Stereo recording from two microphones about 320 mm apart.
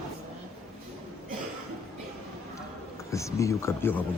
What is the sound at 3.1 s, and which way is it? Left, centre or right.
Speech, centre.